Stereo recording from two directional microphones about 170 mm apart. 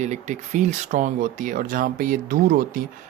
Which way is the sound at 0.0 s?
45° right (ahead or behind).